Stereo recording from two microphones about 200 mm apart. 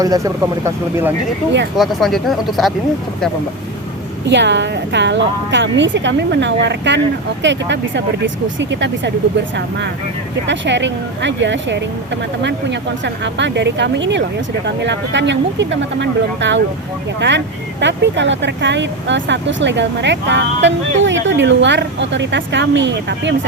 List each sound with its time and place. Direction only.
0.0 s speech: 15° right (ahead or behind)
1.7 s speech: centre (ahead or behind)
4.3 s speech: 60° right (ahead or behind)
10.4 s speech: 65° right (ahead or behind)